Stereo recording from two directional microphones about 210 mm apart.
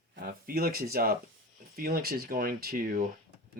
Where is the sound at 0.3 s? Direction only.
45° right (ahead or behind).